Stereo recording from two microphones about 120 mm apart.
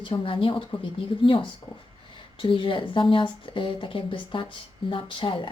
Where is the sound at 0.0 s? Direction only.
45° left (ahead or behind).